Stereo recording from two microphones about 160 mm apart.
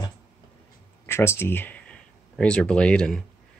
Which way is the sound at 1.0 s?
15° left (ahead or behind).